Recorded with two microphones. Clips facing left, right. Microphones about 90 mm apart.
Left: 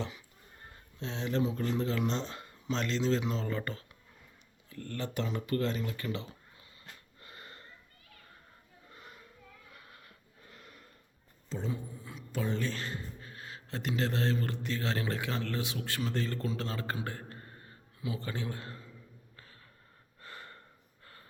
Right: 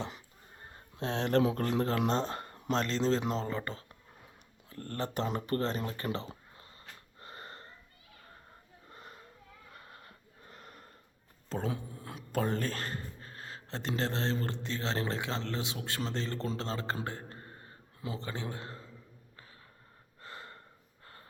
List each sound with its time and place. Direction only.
0.9 s speech: 60° right (ahead or behind)
1.6 s speech: 50° right (ahead or behind)
2.8 s speech: 35° right (ahead or behind)
3.4 s a man's voice: 25° right (ahead or behind)
4.7 s a sound: 40° right (ahead or behind)
8.9 s children playing: 35° right (ahead or behind)
9.7 s sniff: 35° right (ahead or behind)
10.5 s a sound: 35° right (ahead or behind)
11.4 s a sound: 55° right (ahead or behind)
11.7 s speech: 65° right (ahead or behind); by 16.5 s 25° right (ahead or behind)
16.5 s a sound: 30° right (ahead or behind)
18.2 s a man's voice: 25° right (ahead or behind)
20.2 s gasp: 25° right (ahead or behind)
21.0 s snort: 30° right (ahead or behind)